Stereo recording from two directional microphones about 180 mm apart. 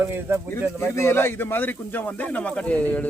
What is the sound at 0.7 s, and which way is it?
Speech, 15° left (ahead or behind).